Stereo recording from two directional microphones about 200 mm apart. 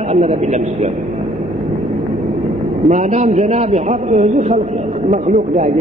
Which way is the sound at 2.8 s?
35° right (ahead or behind).